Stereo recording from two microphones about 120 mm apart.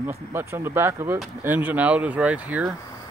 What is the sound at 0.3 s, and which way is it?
Speech, 20° right (ahead or behind).